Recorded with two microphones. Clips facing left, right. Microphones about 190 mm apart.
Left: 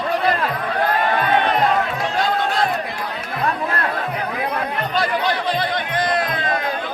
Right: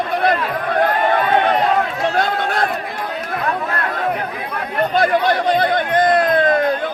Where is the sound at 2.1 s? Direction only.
55° right (ahead or behind).